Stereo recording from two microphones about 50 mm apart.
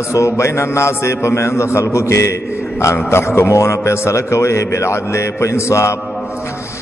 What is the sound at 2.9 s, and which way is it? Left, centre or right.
A man's voice, left.